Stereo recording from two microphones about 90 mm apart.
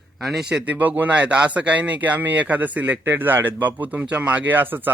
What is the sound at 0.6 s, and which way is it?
A man's voice, 20° right (ahead or behind).